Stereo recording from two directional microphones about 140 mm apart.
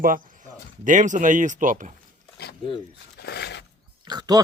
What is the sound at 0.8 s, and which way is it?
Speech, 65° right (ahead or behind).